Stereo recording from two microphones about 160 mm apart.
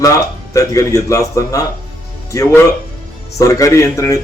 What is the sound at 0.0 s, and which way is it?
A man's voice, 20° left (ahead or behind).